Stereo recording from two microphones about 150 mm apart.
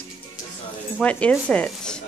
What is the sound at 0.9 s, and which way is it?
Speech, 10° left (ahead or behind).